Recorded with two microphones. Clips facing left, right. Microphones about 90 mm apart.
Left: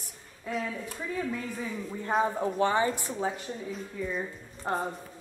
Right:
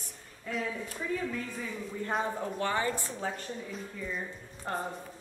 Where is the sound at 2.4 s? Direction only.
20° left (ahead or behind).